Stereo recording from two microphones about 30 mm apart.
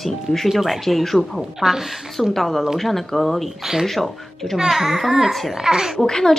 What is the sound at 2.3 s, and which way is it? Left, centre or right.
A woman's voice, centre.